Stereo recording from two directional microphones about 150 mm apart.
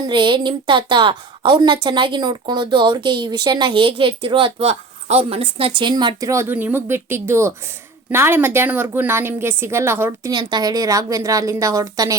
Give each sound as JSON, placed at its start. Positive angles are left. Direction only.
{"t": 0.1, "sound": "a woman's voice", "side_deg": -30}